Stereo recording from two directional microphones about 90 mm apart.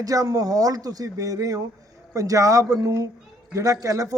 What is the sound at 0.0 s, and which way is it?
Speech, 40° right (ahead or behind).